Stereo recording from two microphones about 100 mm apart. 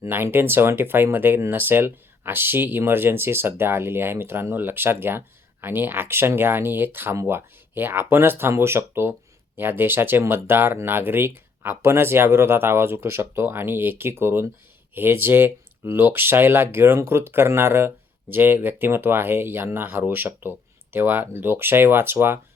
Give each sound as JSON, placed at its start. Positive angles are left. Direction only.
{"t": 0.0, "sound": "speech", "side_deg": -25}